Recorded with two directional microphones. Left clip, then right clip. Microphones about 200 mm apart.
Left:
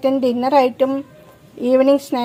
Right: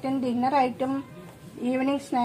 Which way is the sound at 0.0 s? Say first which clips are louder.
Left 10 dB; 55° left (ahead or behind).